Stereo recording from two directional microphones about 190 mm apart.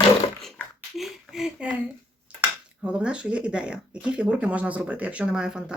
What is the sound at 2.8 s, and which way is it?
Speech, 5° right (ahead or behind).